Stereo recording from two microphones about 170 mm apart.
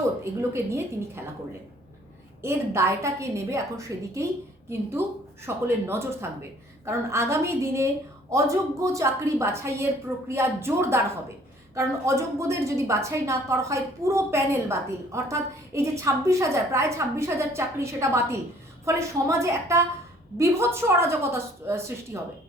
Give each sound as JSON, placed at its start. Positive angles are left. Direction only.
{"t": 0.5, "sound": "a woman's voice", "side_deg": -15}
{"t": 2.4, "sound": "a woman's voice", "side_deg": -15}